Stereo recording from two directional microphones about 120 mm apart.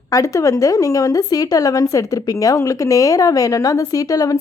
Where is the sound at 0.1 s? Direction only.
25° left (ahead or behind).